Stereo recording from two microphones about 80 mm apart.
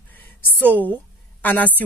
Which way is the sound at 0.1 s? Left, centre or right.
Left.